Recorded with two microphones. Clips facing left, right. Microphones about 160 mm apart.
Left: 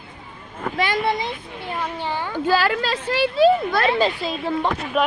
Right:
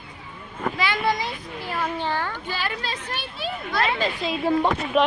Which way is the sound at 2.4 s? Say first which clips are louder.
Left 10 dB; 90° left.